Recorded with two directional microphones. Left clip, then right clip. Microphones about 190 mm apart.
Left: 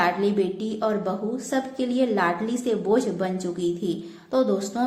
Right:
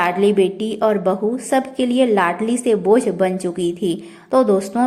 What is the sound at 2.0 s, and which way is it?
A woman's voice, 35° right (ahead or behind).